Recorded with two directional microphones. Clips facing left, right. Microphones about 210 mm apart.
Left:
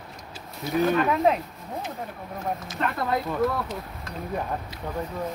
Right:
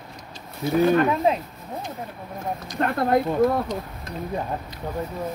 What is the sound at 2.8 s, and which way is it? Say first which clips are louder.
Speech: right 6 dB; 50° right (ahead or behind).